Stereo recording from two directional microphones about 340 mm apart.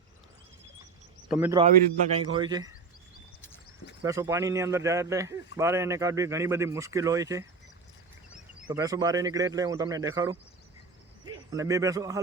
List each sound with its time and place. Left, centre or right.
1.3 s speech: centre
4.0 s a man's voice: centre